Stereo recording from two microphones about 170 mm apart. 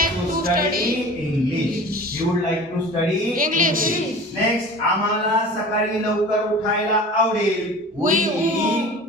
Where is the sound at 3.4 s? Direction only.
55° right (ahead or behind).